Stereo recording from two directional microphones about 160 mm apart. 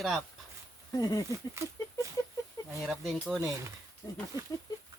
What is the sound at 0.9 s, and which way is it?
Speech, 25° left (ahead or behind).